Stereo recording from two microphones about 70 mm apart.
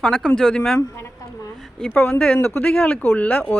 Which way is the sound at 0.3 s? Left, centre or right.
Centre.